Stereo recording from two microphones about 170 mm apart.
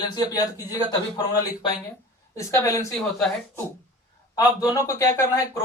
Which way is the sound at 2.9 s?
Centre (ahead or behind).